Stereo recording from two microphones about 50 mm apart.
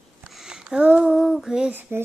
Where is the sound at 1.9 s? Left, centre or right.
Right.